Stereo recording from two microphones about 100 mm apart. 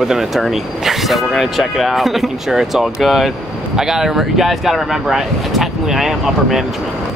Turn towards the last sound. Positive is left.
turn(degrees=-5)  # may be behind; listen again after turning